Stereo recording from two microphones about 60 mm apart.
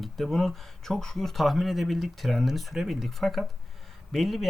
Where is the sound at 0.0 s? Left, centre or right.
Centre.